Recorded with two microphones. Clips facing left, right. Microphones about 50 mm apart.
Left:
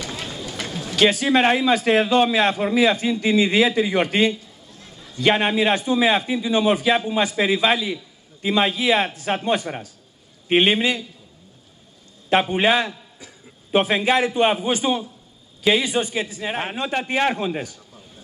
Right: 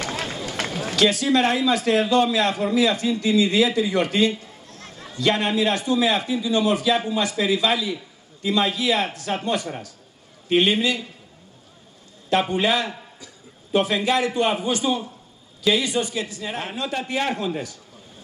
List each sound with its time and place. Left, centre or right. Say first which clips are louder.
0.0 s run: right 3 dB; right
0.9 s a man's voice: left 2 dB; left
4.6 s a sound: right 3 dB; right
5.2 s a man's voice: left 2 dB; left
12.5 s a man's voice: left 3 dB; left